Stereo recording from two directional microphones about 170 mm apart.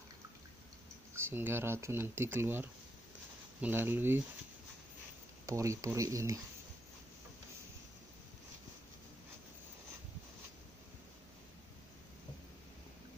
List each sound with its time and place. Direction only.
1.1 s speech: 15° right (ahead or behind)
5.5 s speech: 20° right (ahead or behind)